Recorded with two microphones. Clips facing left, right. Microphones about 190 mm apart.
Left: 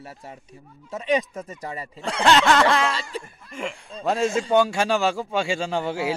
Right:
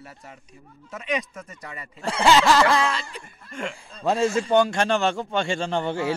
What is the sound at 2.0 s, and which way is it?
Speech, centre (ahead or behind).